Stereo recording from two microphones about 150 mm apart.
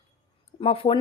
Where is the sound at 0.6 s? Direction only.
40° left (ahead or behind).